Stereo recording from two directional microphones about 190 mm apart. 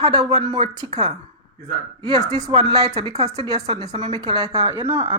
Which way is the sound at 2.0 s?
20° right (ahead or behind).